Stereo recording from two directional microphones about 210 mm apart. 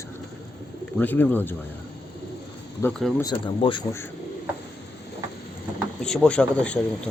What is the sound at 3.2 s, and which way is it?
Speech, 25° left (ahead or behind).